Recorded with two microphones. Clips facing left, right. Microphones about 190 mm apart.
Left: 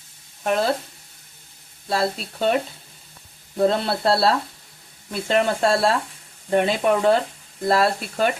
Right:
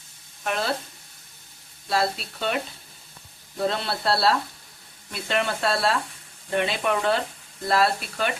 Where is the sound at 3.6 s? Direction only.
45° left (ahead or behind).